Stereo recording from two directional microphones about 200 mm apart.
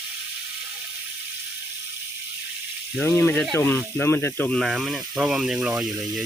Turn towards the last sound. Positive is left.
turn(degrees=-5)  # may be behind; listen again after turning